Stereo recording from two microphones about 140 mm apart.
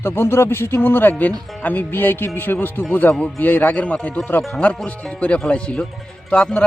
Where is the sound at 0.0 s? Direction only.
15° left (ahead or behind).